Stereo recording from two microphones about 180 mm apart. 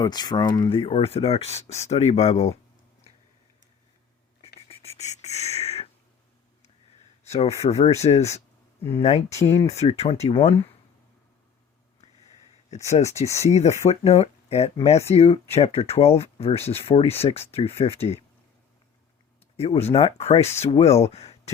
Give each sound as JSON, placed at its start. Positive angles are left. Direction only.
{"t": 0.0, "sound": "speech", "side_deg": 25}
{"t": 4.7, "sound": "a sound", "side_deg": 35}
{"t": 7.3, "sound": "speech", "side_deg": 35}
{"t": 9.3, "sound": "speech", "side_deg": 15}
{"t": 9.6, "sound": "speech", "side_deg": 35}
{"t": 13.2, "sound": "speech", "side_deg": 15}
{"t": 13.5, "sound": "speech", "side_deg": 35}
{"t": 19.5, "sound": "speech", "side_deg": 35}